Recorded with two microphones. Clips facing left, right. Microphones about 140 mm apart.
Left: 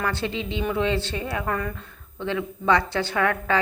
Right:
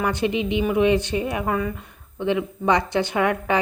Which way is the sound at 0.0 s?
15° right (ahead or behind).